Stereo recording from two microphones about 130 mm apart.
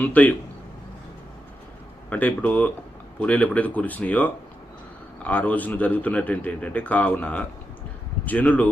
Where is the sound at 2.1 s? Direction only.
10° left (ahead or behind).